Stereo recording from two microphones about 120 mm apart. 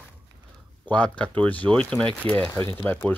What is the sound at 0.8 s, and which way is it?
Speech, 10° left (ahead or behind).